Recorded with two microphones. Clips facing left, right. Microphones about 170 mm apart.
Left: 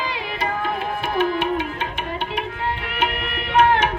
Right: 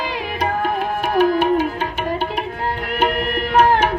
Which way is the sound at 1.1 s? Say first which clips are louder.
Right 6 dB; 40° right (ahead or behind).